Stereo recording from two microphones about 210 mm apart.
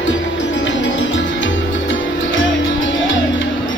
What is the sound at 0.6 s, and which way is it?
Music, 60° left (ahead or behind).